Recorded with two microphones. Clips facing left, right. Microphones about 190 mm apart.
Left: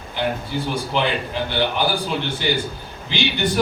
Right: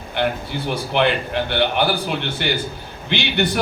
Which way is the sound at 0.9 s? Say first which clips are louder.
Right 4 dB; 60° right (ahead or behind).